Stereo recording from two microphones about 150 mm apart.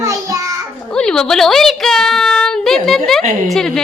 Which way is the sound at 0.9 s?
5° left (ahead or behind).